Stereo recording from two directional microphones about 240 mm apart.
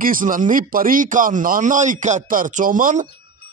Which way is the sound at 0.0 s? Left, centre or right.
Right.